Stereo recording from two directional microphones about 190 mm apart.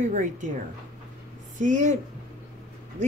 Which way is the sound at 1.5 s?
40° right (ahead or behind).